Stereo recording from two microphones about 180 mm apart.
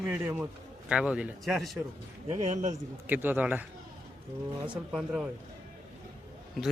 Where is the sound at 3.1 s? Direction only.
10° right (ahead or behind).